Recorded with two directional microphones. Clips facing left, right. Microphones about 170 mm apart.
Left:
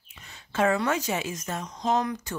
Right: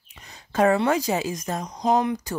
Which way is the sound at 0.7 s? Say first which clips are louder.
Right 5 dB; 35° right (ahead or behind).